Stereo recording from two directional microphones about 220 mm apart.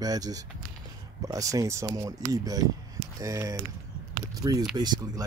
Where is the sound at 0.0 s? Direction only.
15° right (ahead or behind).